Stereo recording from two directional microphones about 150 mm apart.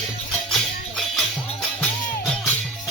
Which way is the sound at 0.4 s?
Centre (ahead or behind).